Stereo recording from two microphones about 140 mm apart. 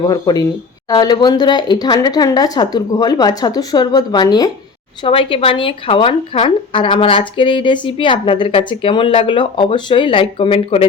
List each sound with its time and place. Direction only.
0.0 s speech: 30° left (ahead or behind)
5.0 s speech: 40° left (ahead or behind)